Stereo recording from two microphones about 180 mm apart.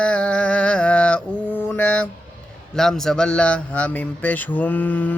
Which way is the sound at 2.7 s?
5° left (ahead or behind).